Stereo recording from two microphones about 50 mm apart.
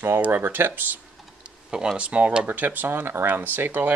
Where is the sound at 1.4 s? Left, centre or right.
Centre.